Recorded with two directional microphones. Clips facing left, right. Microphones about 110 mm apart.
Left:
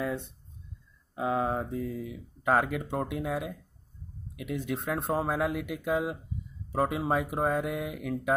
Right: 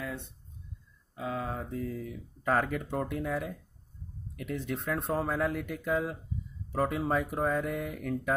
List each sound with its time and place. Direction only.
1.1 s speech: 25° left (ahead or behind); by 8.4 s 10° left (ahead or behind)